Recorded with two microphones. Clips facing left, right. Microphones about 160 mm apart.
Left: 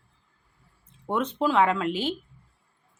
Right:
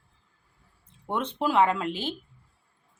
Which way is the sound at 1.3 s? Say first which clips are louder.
Even; 10° right (ahead or behind).